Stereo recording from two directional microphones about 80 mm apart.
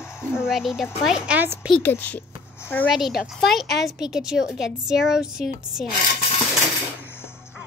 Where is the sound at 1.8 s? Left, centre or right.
Left.